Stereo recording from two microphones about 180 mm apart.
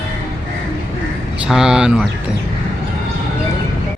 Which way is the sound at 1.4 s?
5° right (ahead or behind).